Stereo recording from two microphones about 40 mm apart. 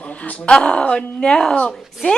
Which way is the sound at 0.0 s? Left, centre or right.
Left.